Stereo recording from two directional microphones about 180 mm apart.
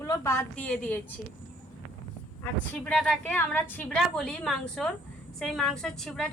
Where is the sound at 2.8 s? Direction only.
5° left (ahead or behind).